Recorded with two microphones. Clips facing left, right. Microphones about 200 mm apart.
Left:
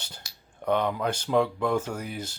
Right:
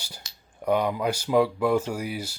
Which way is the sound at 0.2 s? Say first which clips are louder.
Right 1 dB; 20° right (ahead or behind).